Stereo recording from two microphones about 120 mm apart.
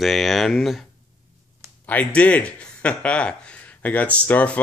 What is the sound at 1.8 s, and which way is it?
Speech, 15° left (ahead or behind).